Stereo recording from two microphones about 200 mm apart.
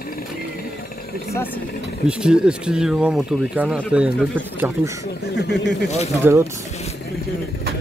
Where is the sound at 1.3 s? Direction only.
10° left (ahead or behind).